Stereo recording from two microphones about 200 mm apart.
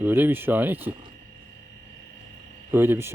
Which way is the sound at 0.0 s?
10° right (ahead or behind).